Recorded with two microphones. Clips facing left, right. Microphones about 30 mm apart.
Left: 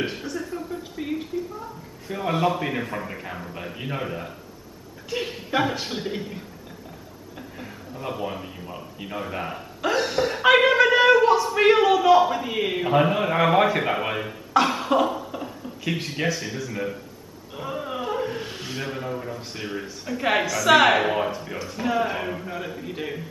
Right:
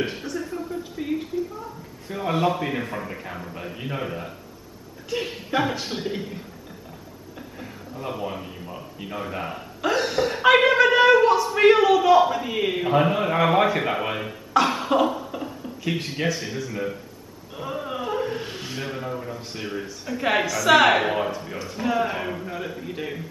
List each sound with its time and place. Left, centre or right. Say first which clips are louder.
0.1 s a woman's voice: even; centre
7.5 s speech: right 1 dB; centre